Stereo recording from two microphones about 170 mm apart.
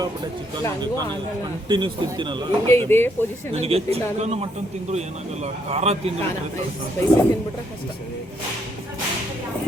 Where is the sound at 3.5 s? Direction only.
35° right (ahead or behind).